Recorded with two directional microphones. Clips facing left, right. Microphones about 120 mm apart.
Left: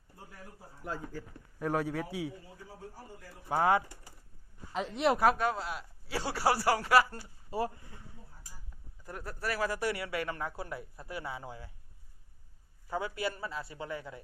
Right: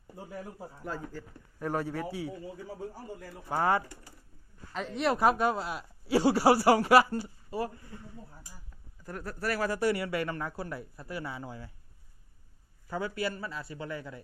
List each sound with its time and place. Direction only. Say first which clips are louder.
0.9 s speech: even; 15° left (ahead or behind)
1.5 s speech: even; centre (ahead or behind)
3.5 s speech: even; 10° left (ahead or behind)
5.2 s a man's voice: right 2 dB; 5° right (ahead or behind)
7.5 s speech: even; 25° left (ahead or behind)
9.0 s speech: right 3 dB; 15° left (ahead or behind)
9.4 s speech: right 3 dB; 5° left (ahead or behind)
12.9 s speech: right 1 dB; 20° left (ahead or behind)